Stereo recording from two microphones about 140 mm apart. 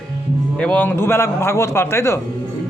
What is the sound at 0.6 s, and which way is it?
Speech, 10° left (ahead or behind).